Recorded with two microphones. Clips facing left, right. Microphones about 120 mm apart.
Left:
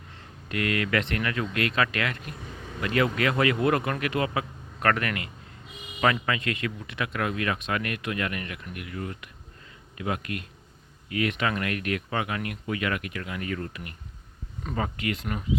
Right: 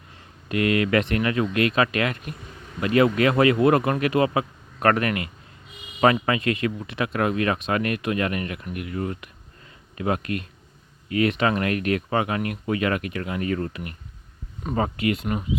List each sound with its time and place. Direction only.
0.4 s speech: 25° right (ahead or behind)